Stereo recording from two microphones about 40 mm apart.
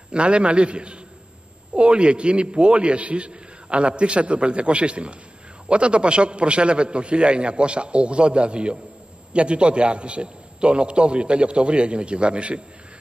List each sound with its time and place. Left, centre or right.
0.1 s a man's voice: right